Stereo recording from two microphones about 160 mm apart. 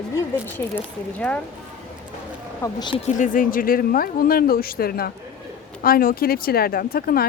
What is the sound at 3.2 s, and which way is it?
Speech, 60° left (ahead or behind).